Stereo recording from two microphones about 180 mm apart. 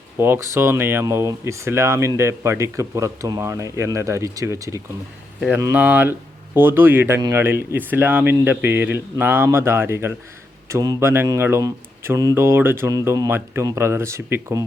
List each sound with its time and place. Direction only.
0.2 s speech: 15° right (ahead or behind)